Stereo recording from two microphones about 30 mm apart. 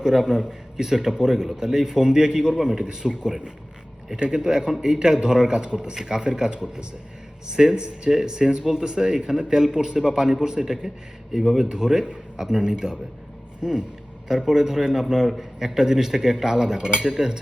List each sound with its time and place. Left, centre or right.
0.0 s speech: centre
11.7 s speech: right